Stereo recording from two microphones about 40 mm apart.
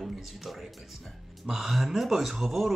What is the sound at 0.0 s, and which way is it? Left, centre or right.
A man's voice, centre.